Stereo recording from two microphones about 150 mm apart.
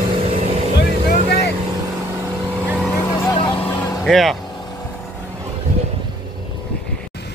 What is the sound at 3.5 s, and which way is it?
Vehicle, 10° left (ahead or behind).